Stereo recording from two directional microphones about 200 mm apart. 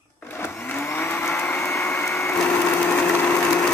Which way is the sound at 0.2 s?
10° left (ahead or behind).